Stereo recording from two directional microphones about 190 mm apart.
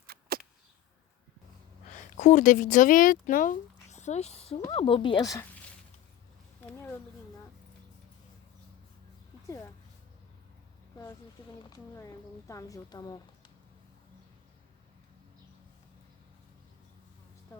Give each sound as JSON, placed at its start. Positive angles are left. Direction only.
{"t": 0.1, "sound": "a sound", "side_deg": -50}
{"t": 1.9, "sound": "a woman's voice", "side_deg": 40}
{"t": 11.6, "sound": "a woman's voice", "side_deg": 20}